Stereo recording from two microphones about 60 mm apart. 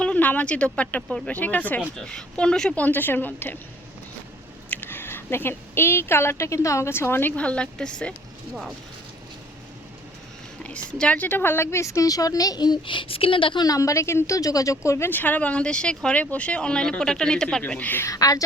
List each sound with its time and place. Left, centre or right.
0.0 s speech: left
2.0 s speech: centre
2.8 s a woman's voice: left
4.7 s speech: left
7.3 s speech: centre
10.6 s speech: left
11.2 s a woman's voice: left
13.7 s a woman's voice: left
14.3 s a woman's voice: left
15.1 s speech: left; by 17.6 s centre
17.7 s speech: left
18.1 s speech: left